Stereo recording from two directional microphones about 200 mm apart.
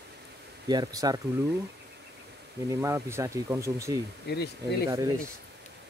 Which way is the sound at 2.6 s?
15° right (ahead or behind).